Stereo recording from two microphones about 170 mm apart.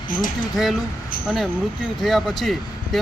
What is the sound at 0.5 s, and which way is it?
Speech, centre (ahead or behind).